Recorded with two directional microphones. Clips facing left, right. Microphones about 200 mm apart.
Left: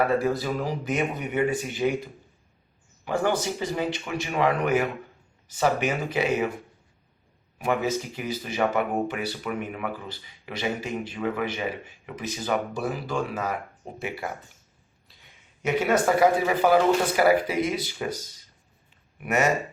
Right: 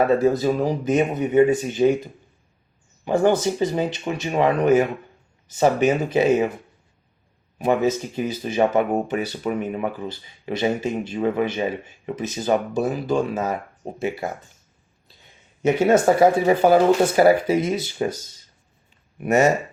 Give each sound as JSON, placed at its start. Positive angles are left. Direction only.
{"t": 0.2, "sound": "speech", "side_deg": -20}
{"t": 3.0, "sound": "speech", "side_deg": -25}
{"t": 7.6, "sound": "speech", "side_deg": -20}
{"t": 15.6, "sound": "speech", "side_deg": -25}
{"t": 19.2, "sound": "speech", "side_deg": -30}